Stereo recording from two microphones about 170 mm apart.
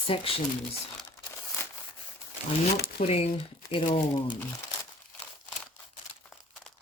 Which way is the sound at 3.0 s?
35° left (ahead or behind).